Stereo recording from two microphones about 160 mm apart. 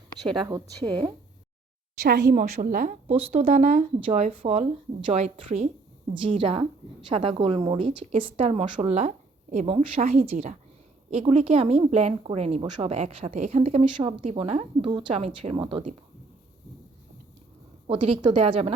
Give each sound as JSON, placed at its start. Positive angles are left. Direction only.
{"t": 0.3, "sound": "a woman's voice", "side_deg": -25}
{"t": 2.3, "sound": "a woman's voice", "side_deg": -55}
{"t": 3.1, "sound": "a woman's voice", "side_deg": -40}
{"t": 6.2, "sound": "a woman's voice", "side_deg": -35}
{"t": 8.8, "sound": "a woman's voice", "side_deg": -45}
{"t": 10.0, "sound": "a woman's voice", "side_deg": -50}
{"t": 14.8, "sound": "a woman's voice", "side_deg": -30}
{"t": 17.8, "sound": "a woman's voice", "side_deg": -35}